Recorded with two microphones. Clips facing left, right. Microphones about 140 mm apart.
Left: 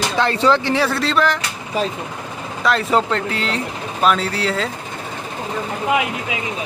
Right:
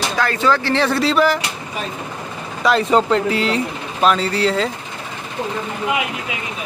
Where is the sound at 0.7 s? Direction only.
5° left (ahead or behind).